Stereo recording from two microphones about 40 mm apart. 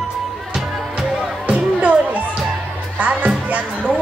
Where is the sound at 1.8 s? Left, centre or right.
Right.